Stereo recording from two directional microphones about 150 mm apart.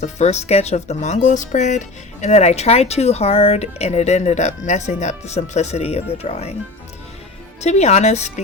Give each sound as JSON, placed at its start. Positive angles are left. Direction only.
{"t": 0.0, "sound": "speech", "side_deg": 50}
{"t": 7.6, "sound": "speech", "side_deg": 50}